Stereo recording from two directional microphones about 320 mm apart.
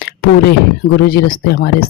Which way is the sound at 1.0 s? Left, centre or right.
Left.